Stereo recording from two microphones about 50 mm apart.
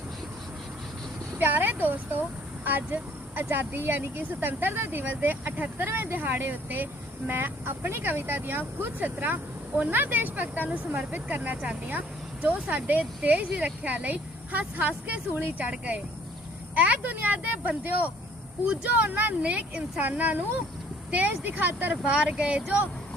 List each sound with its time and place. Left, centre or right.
1.4 s speech: right
5.7 s speech: right
19.5 s speech: right
22.0 s speech: right